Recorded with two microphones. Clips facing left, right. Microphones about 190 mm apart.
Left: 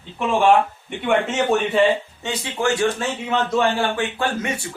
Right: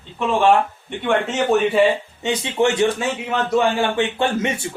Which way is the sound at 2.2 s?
20° right (ahead or behind).